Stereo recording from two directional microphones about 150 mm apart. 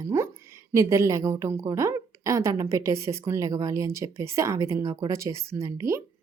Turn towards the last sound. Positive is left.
turn(degrees=-20)  # may be behind; listen again after turning